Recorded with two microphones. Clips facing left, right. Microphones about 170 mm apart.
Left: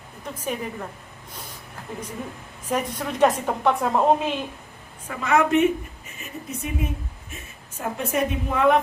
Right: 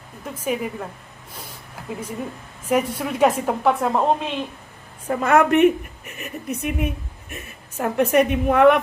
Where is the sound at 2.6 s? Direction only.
10° right (ahead or behind).